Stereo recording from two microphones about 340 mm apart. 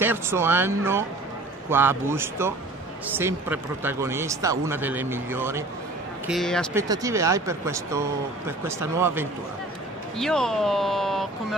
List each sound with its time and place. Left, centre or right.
0.0 s speech: centre
6.8 s speech: centre